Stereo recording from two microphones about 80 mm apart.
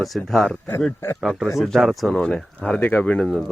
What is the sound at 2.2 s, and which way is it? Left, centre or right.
Speech, centre.